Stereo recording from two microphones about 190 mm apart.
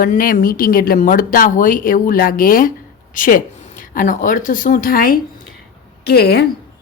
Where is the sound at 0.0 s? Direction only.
45° left (ahead or behind).